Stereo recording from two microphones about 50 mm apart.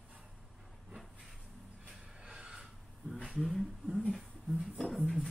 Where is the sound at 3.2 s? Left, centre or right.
Centre.